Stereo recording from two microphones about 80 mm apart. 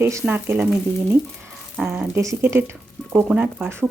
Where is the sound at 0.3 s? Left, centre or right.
Right.